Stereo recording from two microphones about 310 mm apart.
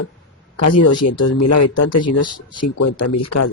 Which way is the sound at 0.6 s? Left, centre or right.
Left.